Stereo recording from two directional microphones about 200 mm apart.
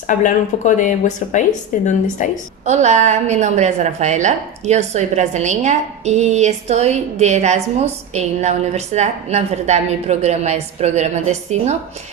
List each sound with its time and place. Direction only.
0.1 s speech: 40° left (ahead or behind)
2.6 s a woman's voice: 35° right (ahead or behind)